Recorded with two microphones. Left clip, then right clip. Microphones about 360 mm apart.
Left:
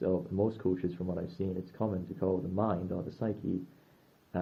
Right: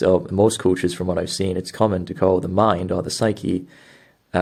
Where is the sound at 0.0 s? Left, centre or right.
Right.